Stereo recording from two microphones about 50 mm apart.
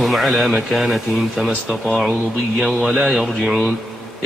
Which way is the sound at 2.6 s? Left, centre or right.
Centre.